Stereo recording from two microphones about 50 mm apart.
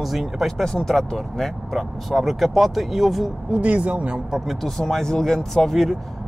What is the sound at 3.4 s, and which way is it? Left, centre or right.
Speech, right.